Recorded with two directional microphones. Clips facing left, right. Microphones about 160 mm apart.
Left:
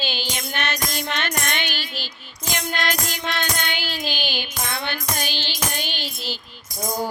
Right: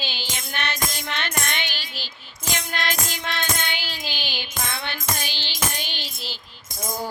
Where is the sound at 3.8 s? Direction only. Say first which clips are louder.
Left 5 dB; 50° left (ahead or behind).